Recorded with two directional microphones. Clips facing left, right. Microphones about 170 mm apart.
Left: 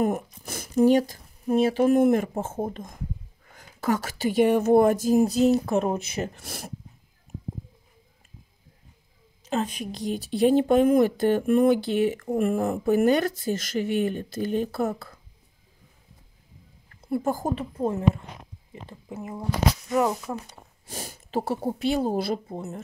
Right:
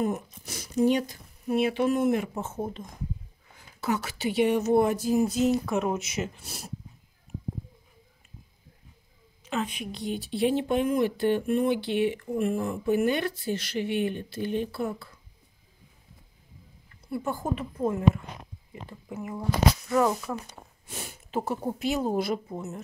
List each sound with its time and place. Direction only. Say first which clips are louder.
0.0 s speech: left 4 dB; 55° left (ahead or behind); by 6.3 s 35° left (ahead or behind)
6.3 s speech: left 4 dB; 55° left (ahead or behind)
9.4 s speech: left 3 dB; 40° left (ahead or behind)
17.2 s speech: left 2 dB; 35° left (ahead or behind); by 20.2 s 20° left (ahead or behind)
20.9 s speech: left 3 dB; 40° left (ahead or behind)